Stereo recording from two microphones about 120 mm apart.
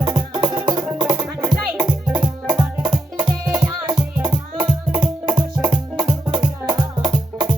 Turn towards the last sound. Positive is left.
turn(degrees=-45)  # may be behind; listen again after turning